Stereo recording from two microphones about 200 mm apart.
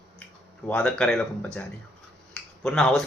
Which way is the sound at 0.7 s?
5° left (ahead or behind).